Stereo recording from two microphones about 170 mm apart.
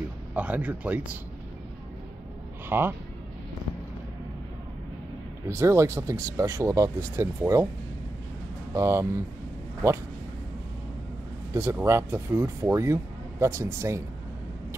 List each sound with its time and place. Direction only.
0.3 s speech: 10° right (ahead or behind)
2.7 s speech: 10° right (ahead or behind)
5.5 s speech: 15° right (ahead or behind)
8.7 s speech: 15° right (ahead or behind)
11.5 s speech: 15° right (ahead or behind)